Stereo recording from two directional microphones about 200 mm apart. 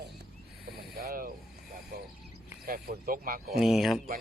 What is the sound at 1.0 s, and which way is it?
Speech, 50° right (ahead or behind).